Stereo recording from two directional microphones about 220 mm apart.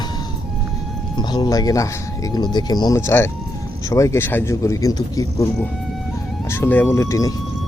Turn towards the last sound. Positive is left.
turn(degrees=15)  # may be behind; listen again after turning